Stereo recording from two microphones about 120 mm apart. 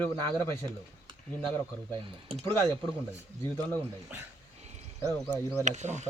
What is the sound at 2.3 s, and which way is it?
Speech, 55° right (ahead or behind).